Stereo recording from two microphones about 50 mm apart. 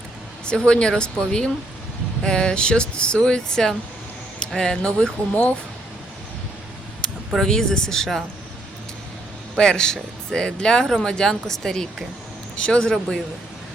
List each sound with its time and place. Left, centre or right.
0.4 s speech: centre
5.3 s speech: left
7.3 s speech: centre
9.6 s speech: centre